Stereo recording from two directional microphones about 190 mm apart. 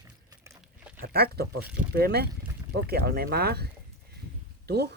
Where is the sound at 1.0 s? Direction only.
55° right (ahead or behind).